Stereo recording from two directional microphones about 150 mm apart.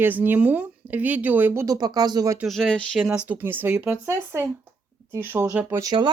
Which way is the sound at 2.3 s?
Centre (ahead or behind).